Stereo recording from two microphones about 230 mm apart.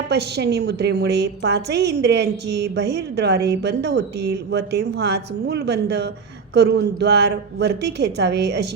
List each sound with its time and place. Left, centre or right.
0.1 s a woman's voice: right